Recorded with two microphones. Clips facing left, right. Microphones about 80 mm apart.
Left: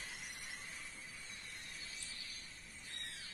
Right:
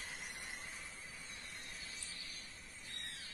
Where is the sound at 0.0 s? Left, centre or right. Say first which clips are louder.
Right 2 dB; right.